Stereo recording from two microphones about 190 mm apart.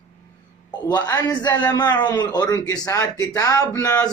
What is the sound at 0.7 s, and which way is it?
A man's voice, 20° left (ahead or behind).